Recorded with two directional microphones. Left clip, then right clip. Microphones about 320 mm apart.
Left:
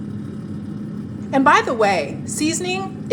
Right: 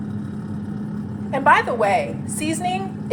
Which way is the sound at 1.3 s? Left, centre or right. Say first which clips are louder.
Left 1 dB; left.